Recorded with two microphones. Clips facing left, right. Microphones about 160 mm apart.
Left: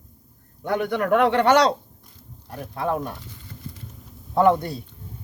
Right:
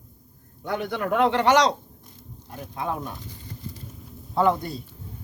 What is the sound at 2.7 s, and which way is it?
Speech, 60° left (ahead or behind).